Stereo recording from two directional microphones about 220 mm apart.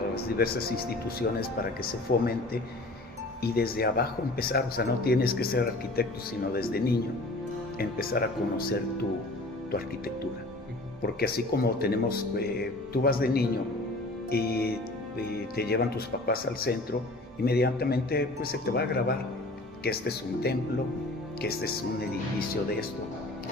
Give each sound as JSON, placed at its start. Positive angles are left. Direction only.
{"t": 0.1, "sound": "speech", "side_deg": 45}
{"t": 11.0, "sound": "speech", "side_deg": 45}